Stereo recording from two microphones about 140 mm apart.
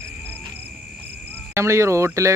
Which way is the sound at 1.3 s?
20° right (ahead or behind).